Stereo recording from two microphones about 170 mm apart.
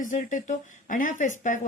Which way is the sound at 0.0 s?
50° left (ahead or behind).